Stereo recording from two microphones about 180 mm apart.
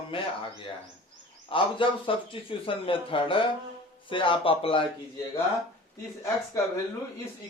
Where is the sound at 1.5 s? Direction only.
30° left (ahead or behind).